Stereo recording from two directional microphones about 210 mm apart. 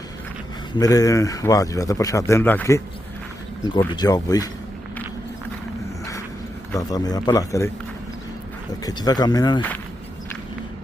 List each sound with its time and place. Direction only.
0.8 s speech: 15° left (ahead or behind)
6.7 s speech: 15° left (ahead or behind)
8.8 s speech: 20° left (ahead or behind)